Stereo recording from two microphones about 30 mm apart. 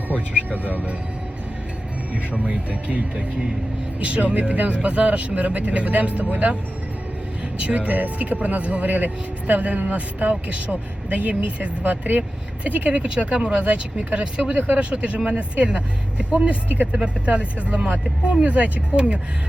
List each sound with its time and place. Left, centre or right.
0.6 s speech: right
2.1 s a man's voice: right
7.6 s speech: right
11.8 s speech: right
12.6 s a man's voice: right
12.9 s a man's voice: right
16.6 s speech: right
17.2 s a man's voice: right